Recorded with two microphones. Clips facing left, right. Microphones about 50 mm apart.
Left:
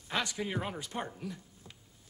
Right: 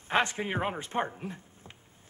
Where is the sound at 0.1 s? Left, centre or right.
Right.